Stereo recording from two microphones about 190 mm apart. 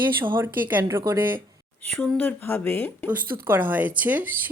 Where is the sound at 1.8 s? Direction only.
5° left (ahead or behind).